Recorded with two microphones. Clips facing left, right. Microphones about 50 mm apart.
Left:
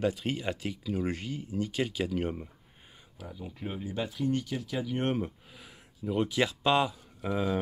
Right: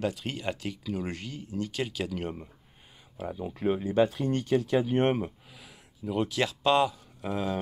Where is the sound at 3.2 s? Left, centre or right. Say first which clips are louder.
Right 10 dB; right.